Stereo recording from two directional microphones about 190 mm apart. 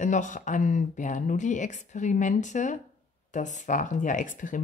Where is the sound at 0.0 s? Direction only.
40° left (ahead or behind).